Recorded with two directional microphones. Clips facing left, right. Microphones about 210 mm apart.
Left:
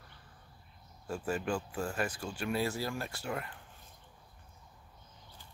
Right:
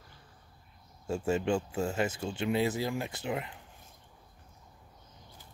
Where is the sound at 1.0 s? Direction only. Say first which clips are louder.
Right 5 dB; 25° right (ahead or behind).